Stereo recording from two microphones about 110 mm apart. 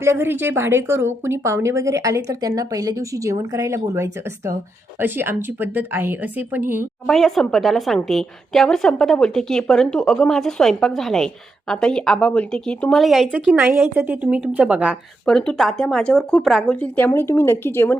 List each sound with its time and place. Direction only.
0.0 s a woman's voice: 25° right (ahead or behind)
7.1 s a woman's voice: centre (ahead or behind)
13.3 s speech: 15° right (ahead or behind)
15.3 s a woman's voice: 5° left (ahead or behind)
17.1 s speech: 25° left (ahead or behind)